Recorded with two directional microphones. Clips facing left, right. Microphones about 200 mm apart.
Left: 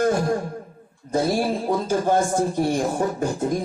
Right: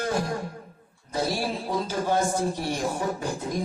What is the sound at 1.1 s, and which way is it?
Speech, 50° left (ahead or behind).